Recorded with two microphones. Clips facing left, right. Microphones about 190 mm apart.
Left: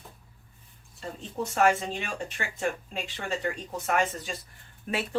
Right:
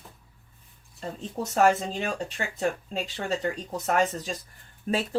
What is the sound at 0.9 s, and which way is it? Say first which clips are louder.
Speech: right 1 dB; 35° right (ahead or behind).